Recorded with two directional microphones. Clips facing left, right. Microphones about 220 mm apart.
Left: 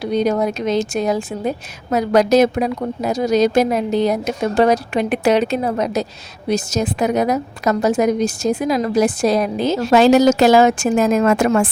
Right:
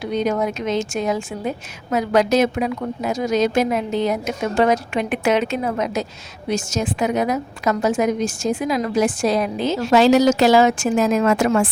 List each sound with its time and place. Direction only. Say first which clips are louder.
0.0 s a woman's voice: left 3 dB; 35° left (ahead or behind)